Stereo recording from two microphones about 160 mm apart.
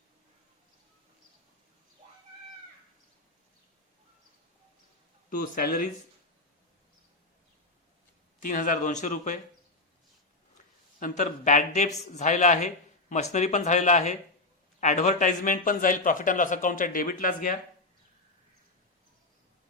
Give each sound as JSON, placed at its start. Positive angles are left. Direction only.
{"t": 5.4, "sound": "a man's voice", "side_deg": 60}
{"t": 8.4, "sound": "speech", "side_deg": 55}
{"t": 11.0, "sound": "a man's voice", "side_deg": 55}